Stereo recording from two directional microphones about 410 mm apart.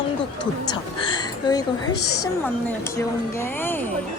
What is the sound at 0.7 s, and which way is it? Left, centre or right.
A woman's voice, centre.